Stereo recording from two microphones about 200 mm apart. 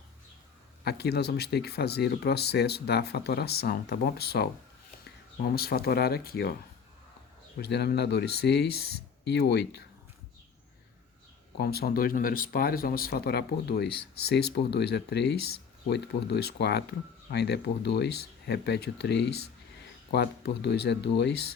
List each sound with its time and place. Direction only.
0.9 s speech: 55° left (ahead or behind)
5.5 s speech: 50° left (ahead or behind)
7.6 s speech: 55° left (ahead or behind)
11.5 s speech: 50° left (ahead or behind)